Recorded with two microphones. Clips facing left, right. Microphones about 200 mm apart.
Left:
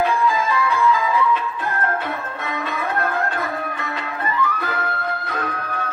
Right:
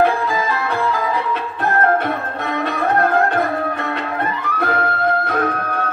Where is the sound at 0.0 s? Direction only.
60° right (ahead or behind).